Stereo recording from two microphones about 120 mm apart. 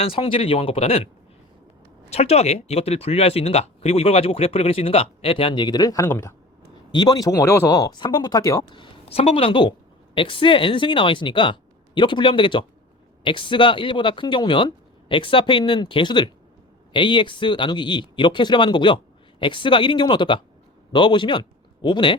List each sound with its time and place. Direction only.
0.0 s speech: 50° left (ahead or behind)
2.0 s speech: 60° left (ahead or behind); by 6.3 s 20° left (ahead or behind)
6.9 s speech: 35° left (ahead or behind)
8.7 s speech: 50° left (ahead or behind)